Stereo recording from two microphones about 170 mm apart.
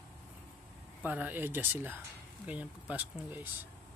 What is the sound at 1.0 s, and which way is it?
Speech, 10° right (ahead or behind).